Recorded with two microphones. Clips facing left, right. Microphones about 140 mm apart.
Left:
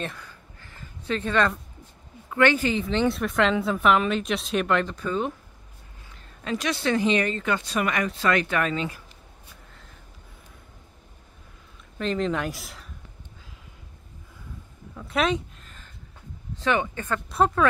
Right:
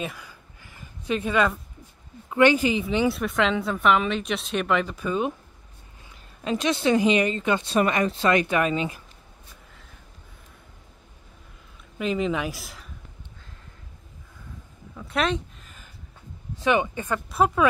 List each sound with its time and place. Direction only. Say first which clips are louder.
0.0 s a sound: right 1 dB; 10° right (ahead or behind)
2.3 s a woman's voice: right 2 dB; 15° right (ahead or behind)
6.4 s speech: right 3 dB; 20° right (ahead or behind)
12.0 s a woman's voice: right 1 dB; 5° right (ahead or behind)
15.0 s a sound: left 1 dB; centre (ahead or behind)
16.5 s speech: right 2 dB; 15° right (ahead or behind)
17.3 s a woman's voice: even; 5° right (ahead or behind)